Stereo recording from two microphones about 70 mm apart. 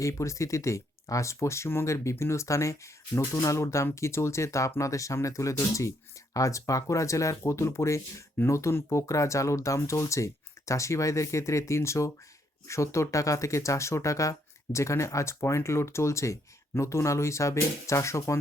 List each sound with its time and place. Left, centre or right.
0.0 s speech: left